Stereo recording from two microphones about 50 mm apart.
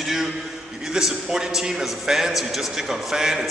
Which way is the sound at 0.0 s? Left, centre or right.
Centre.